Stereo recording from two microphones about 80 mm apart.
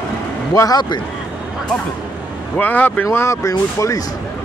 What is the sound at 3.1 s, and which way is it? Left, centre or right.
Speech, left.